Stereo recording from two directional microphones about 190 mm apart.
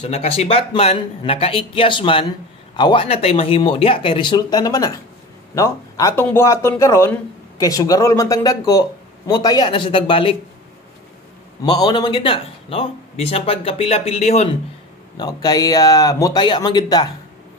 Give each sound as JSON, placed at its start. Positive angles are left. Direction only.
{"t": 0.0, "sound": "speech", "side_deg": 30}
{"t": 11.6, "sound": "speech", "side_deg": 20}
{"t": 15.1, "sound": "speech", "side_deg": 20}